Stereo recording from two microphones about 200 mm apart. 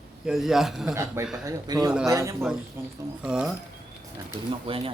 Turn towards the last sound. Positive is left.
turn(degrees=-25)  # may be behind; listen again after turning